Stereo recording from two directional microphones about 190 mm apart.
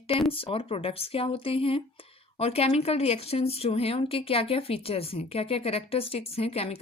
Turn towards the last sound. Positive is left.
turn(degrees=30)  # may be behind; listen again after turning